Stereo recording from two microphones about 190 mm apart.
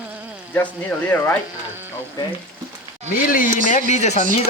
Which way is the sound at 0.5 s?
10° left (ahead or behind).